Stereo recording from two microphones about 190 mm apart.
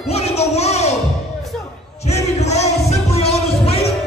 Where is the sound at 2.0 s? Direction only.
35° left (ahead or behind).